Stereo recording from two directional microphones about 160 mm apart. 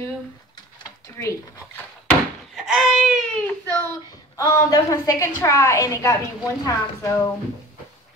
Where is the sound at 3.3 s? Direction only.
10° left (ahead or behind).